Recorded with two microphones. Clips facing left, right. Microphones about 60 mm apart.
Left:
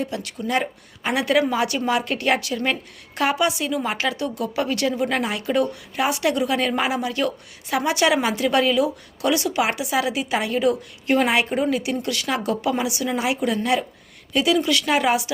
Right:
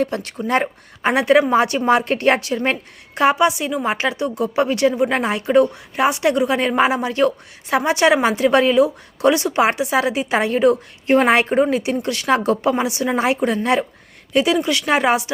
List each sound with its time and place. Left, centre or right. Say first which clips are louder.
0.0 s a woman's voice: right 5 dB; right